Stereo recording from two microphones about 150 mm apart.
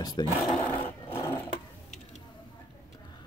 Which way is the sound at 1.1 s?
15° left (ahead or behind).